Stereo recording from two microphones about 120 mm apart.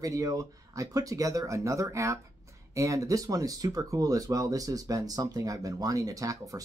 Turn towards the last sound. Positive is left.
turn(degrees=-30)  # may be behind; listen again after turning